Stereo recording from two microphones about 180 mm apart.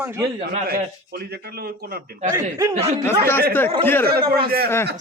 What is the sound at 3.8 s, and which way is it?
Speech, 10° left (ahead or behind).